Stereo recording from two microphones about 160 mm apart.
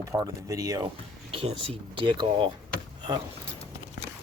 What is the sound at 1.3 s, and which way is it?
Speech, 35° right (ahead or behind).